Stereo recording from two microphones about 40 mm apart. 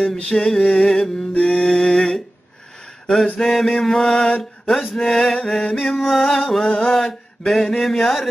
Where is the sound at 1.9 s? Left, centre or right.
Centre.